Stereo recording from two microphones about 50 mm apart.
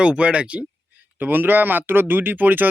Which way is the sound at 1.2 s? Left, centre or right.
Right.